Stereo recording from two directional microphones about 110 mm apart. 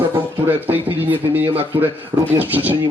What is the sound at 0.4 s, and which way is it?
Speech, 15° right (ahead or behind).